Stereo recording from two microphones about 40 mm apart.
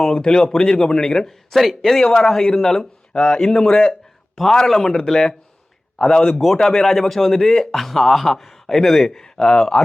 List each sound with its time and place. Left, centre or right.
0.0 s speech: centre
1.5 s speech: centre
6.4 s a man's voice: centre